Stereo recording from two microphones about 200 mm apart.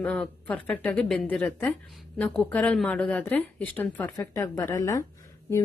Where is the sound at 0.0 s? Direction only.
5° left (ahead or behind).